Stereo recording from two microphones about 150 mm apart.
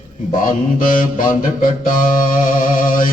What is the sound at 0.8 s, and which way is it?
Music, 65° left (ahead or behind).